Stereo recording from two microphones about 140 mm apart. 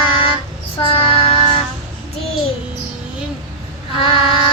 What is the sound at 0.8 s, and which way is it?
Child singing, 40° left (ahead or behind).